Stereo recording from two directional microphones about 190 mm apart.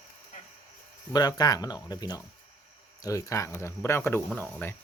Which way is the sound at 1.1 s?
20° left (ahead or behind).